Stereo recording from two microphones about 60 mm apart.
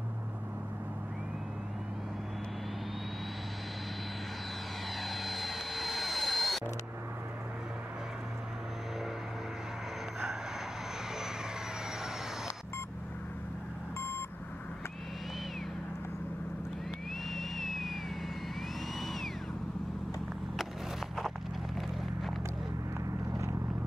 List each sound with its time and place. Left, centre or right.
5.0 s vehicle: centre
13.9 s vehicle: left
17.3 s vehicle: centre